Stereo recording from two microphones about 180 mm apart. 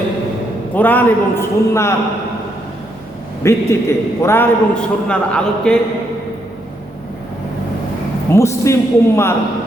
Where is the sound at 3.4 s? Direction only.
15° left (ahead or behind).